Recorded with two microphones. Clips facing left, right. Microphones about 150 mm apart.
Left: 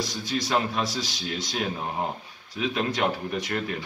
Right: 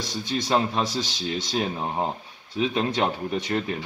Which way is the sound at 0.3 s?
25° right (ahead or behind).